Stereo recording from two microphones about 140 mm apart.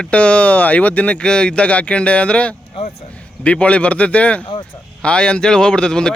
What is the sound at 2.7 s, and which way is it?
Speech, 45° left (ahead or behind).